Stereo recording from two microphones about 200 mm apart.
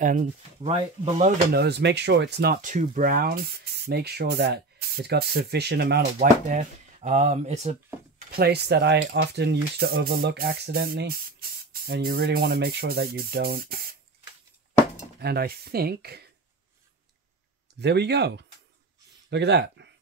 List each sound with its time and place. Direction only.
0.0 s speech: 40° right (ahead or behind)
0.6 s speech: 30° right (ahead or behind)
1.5 s speech: 55° right (ahead or behind)
6.1 s speech: 35° right (ahead or behind)
8.3 s cutlery: 50° right (ahead or behind)
15.1 s cutlery: 50° right (ahead or behind)
17.7 s speech: 55° right (ahead or behind)